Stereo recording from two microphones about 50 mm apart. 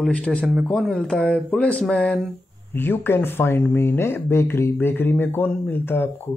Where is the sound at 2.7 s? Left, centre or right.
Left.